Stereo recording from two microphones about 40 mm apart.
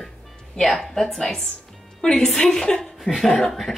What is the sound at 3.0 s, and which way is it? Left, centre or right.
Speech, centre.